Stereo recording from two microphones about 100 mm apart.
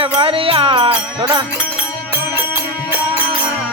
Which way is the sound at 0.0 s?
65° right (ahead or behind).